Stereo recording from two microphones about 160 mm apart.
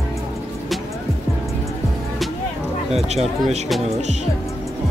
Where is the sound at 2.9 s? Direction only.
40° right (ahead or behind).